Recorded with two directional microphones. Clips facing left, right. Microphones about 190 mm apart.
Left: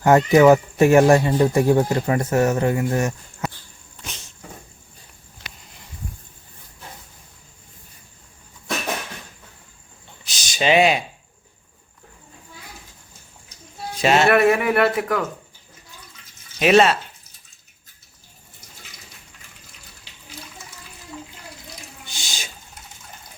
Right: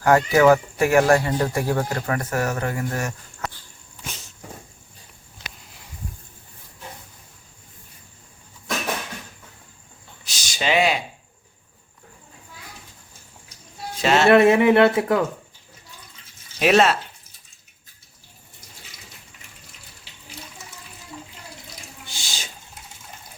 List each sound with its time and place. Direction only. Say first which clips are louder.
0.0 s speech: left 3 dB; 20° left (ahead or behind)
10.2 s a sound: left 4 dB; 20° left (ahead or behind)
14.0 s speech: left 1 dB; 15° left (ahead or behind)
14.3 s speech: right 3 dB; 25° right (ahead or behind)
16.6 s speech: left 2 dB; centre (ahead or behind)
22.0 s water: even; 15° left (ahead or behind)